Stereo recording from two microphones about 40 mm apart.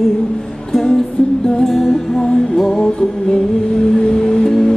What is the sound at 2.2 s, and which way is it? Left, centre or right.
Music, centre.